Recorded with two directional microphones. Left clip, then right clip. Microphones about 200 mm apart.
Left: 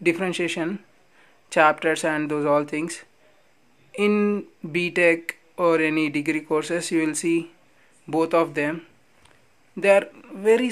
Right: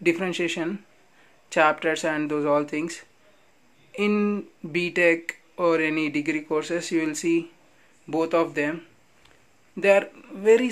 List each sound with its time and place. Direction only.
0.0 s speech: 15° left (ahead or behind)